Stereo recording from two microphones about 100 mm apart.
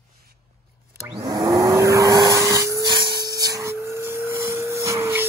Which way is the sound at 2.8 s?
50° right (ahead or behind).